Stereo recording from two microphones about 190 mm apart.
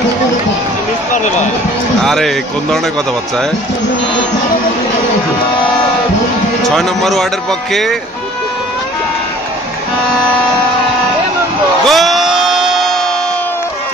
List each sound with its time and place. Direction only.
1.1 s speech: 40° left (ahead or behind)
2.0 s speech: centre (ahead or behind)
6.6 s speech: centre (ahead or behind)
11.8 s music: centre (ahead or behind)